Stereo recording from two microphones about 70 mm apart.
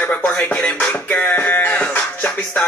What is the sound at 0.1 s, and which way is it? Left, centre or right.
Music, centre.